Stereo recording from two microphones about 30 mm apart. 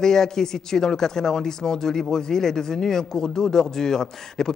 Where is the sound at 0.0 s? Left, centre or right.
Centre.